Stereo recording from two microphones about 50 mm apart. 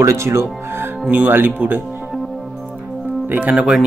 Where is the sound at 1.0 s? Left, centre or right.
Right.